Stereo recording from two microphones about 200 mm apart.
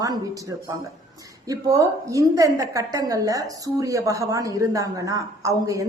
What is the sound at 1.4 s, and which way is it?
A woman's voice, 15° right (ahead or behind).